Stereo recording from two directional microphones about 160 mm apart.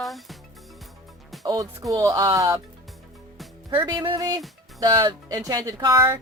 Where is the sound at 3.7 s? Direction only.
30° right (ahead or behind).